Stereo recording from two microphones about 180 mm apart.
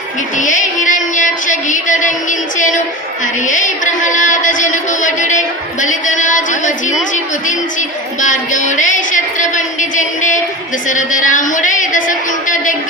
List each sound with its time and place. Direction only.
0.3 s a woman's voice: 45° left (ahead or behind)
4.0 s a woman's voice: 45° left (ahead or behind)